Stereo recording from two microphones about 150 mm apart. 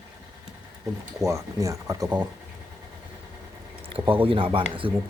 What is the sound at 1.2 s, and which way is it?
Speech, 20° right (ahead or behind).